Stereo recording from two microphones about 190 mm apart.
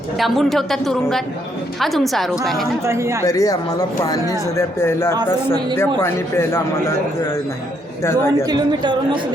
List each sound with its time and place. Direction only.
0.2 s a woman's voice: centre (ahead or behind)
2.8 s speech: 15° right (ahead or behind)
3.2 s speech: 20° left (ahead or behind)
8.4 s speech: 20° right (ahead or behind)